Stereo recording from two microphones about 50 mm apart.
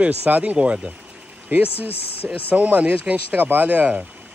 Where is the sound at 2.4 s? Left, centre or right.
Right.